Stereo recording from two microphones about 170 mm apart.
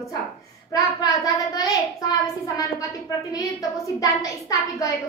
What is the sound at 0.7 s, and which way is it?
Speech, 20° left (ahead or behind).